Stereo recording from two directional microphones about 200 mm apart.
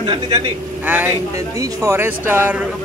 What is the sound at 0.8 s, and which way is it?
A man's voice, 10° right (ahead or behind).